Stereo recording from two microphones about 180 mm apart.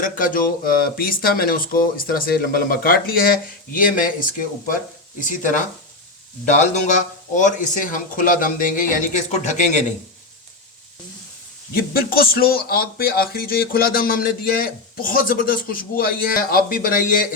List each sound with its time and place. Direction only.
0.0 s speech: 50° left (ahead or behind)
7.3 s speech: 45° left (ahead or behind)
11.7 s speech: 55° left (ahead or behind)